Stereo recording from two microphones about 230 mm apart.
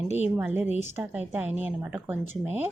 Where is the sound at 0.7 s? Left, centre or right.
Left.